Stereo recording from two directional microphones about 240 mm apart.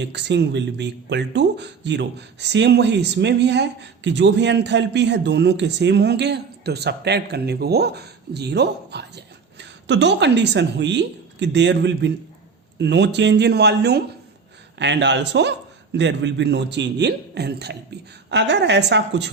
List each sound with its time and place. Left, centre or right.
0.0 s speech: right